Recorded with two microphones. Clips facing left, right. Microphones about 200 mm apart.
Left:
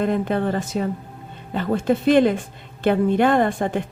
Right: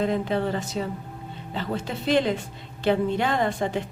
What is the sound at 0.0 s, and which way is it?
Speech, 55° left (ahead or behind).